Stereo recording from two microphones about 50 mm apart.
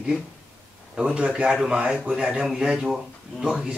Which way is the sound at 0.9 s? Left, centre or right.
Right.